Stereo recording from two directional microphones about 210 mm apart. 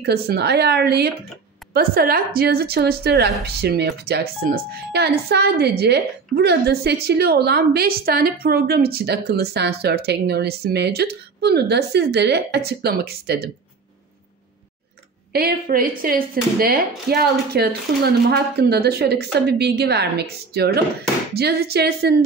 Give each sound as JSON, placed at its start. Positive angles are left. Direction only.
{"t": 0.0, "sound": "a woman's voice", "side_deg": -50}
{"t": 15.3, "sound": "a woman's voice", "side_deg": -45}